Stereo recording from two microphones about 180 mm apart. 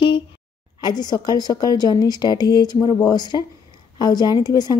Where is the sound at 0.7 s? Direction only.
25° left (ahead or behind).